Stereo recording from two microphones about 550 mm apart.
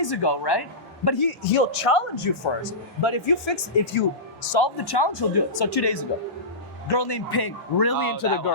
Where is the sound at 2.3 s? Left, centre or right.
Left.